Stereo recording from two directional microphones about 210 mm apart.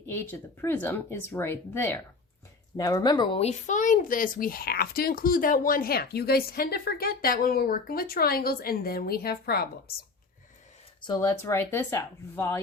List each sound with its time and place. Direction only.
0.0 s speech: 10° left (ahead or behind); by 9.9 s 45° left (ahead or behind)
11.0 s speech: 20° left (ahead or behind)